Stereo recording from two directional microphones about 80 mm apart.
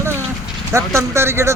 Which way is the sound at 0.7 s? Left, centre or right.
Right.